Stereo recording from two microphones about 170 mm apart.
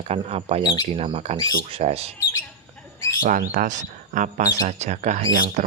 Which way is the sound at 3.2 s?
55° right (ahead or behind).